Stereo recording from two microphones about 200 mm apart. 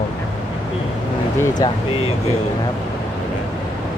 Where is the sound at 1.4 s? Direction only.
20° left (ahead or behind).